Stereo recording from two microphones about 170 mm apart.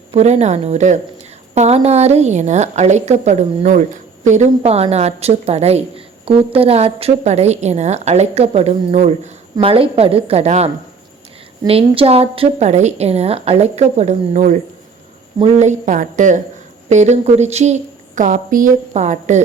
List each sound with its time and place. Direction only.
0.1 s a woman's voice: 40° right (ahead or behind)